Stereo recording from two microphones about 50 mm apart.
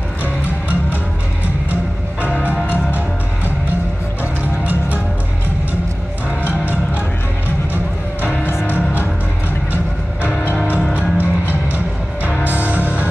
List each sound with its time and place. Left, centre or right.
2.2 s music: left
4.2 s music: right
8.6 s music: left
11.0 s music: right